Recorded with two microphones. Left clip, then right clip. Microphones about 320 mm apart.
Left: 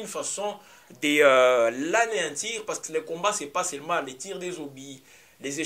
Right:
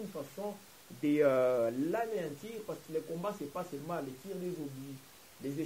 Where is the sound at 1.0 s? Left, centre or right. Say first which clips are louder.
Left 10 dB; centre.